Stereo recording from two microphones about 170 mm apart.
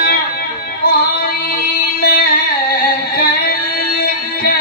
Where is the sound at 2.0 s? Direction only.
60° left (ahead or behind).